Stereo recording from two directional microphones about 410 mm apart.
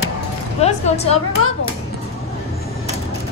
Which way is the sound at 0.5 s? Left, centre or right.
Centre.